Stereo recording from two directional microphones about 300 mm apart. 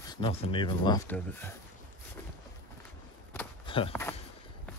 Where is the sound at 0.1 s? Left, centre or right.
Centre.